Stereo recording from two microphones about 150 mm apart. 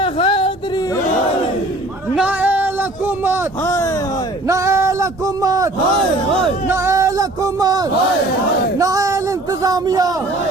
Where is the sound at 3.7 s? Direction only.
20° left (ahead or behind).